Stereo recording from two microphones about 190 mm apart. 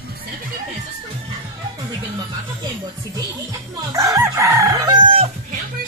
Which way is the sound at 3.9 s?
15° right (ahead or behind).